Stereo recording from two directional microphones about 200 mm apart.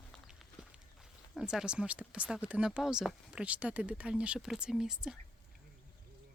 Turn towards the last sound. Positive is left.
turn(degrees=-5)  # may be behind; listen again after turning